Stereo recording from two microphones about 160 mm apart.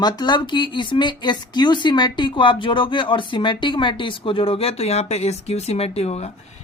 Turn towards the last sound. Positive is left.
turn(degrees=40)  # may be behind; listen again after turning